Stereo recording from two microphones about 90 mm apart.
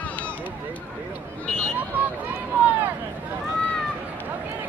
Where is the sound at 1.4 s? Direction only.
10° left (ahead or behind).